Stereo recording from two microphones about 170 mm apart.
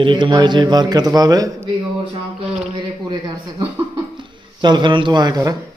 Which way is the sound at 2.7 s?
25° right (ahead or behind).